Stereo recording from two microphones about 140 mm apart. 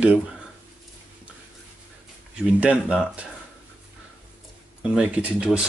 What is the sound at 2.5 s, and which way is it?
Speech, 10° right (ahead or behind).